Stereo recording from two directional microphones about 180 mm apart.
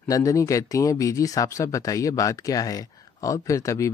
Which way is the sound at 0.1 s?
20° left (ahead or behind).